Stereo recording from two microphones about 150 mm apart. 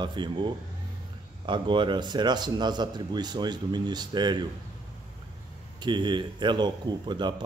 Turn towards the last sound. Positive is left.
turn(degrees=-30)  # may be behind; listen again after turning